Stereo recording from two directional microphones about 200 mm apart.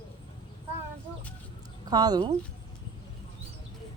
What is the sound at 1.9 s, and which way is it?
Speech, 20° right (ahead or behind).